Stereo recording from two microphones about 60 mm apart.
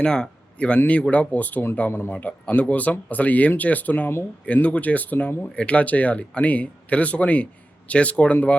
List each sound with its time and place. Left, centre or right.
0.0 s speech: centre
1.9 s a man's voice: left
2.5 s speech: left